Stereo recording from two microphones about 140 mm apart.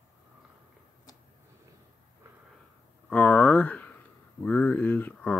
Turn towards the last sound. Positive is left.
turn(degrees=10)  # may be behind; listen again after turning